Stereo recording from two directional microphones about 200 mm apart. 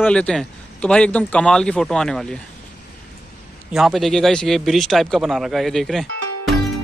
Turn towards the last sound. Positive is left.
turn(degrees=0)  # may be behind; listen again after turning